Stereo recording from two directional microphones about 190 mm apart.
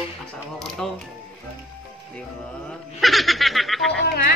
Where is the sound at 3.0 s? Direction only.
Centre (ahead or behind).